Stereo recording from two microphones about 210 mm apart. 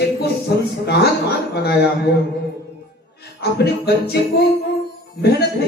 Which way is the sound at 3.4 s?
50° left (ahead or behind).